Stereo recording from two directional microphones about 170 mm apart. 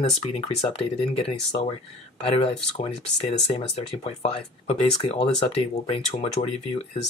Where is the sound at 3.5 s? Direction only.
40° left (ahead or behind).